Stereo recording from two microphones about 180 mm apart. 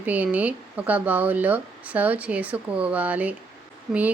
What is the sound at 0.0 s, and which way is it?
Speech, 10° right (ahead or behind).